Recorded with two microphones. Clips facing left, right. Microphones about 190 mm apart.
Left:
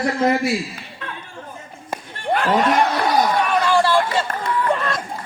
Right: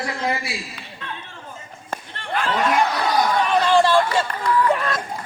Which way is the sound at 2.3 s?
65° left (ahead or behind).